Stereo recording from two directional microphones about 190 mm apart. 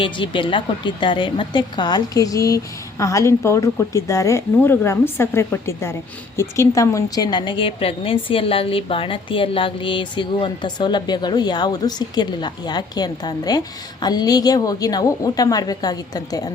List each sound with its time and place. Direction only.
0.0 s a woman's voice: 25° left (ahead or behind)